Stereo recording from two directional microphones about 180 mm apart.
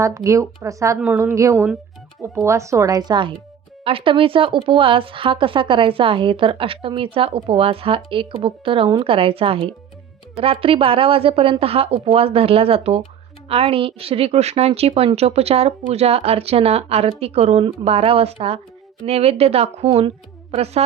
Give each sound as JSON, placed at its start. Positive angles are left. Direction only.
{"t": 0.0, "sound": "a woman's voice", "side_deg": -15}